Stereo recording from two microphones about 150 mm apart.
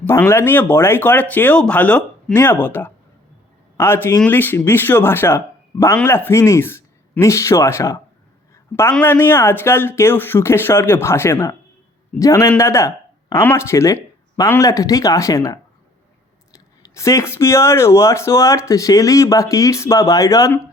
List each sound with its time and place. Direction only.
0.0 s speech: 15° left (ahead or behind)